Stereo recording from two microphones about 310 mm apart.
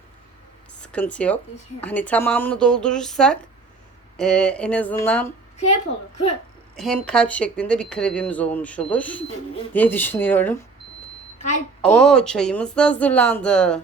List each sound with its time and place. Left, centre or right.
0.8 s speech: centre
6.7 s speech: centre
11.8 s speech: centre